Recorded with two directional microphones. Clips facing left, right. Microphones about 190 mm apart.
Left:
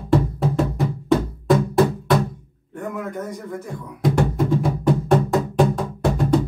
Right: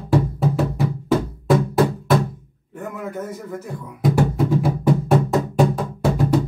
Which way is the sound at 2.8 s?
5° right (ahead or behind).